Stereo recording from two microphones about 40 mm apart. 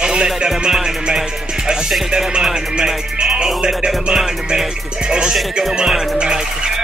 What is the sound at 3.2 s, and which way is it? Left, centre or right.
Speech, centre.